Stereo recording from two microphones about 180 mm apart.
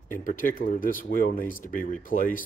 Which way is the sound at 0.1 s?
50° left (ahead or behind).